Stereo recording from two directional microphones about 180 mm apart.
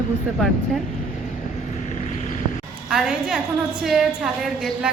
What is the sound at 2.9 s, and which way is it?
A woman's voice, 5° right (ahead or behind).